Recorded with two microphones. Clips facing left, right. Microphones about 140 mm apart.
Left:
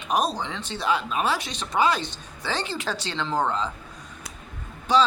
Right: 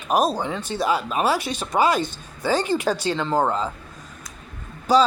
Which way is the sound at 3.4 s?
40° right (ahead or behind).